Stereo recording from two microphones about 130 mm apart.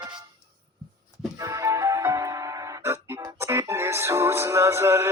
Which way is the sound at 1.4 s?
25° right (ahead or behind).